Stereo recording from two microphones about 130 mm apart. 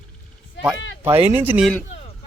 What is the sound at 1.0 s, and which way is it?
Speech, 15° right (ahead or behind).